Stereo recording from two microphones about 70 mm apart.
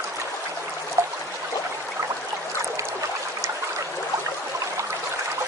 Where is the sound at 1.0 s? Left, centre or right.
Right.